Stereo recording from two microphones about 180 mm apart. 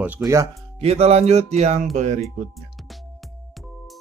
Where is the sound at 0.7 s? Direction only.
35° right (ahead or behind).